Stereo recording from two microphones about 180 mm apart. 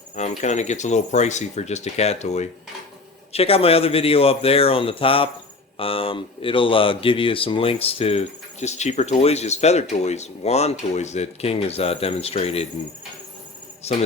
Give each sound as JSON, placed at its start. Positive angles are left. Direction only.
{"t": 0.2, "sound": "speech", "side_deg": 40}
{"t": 13.8, "sound": "speech", "side_deg": 35}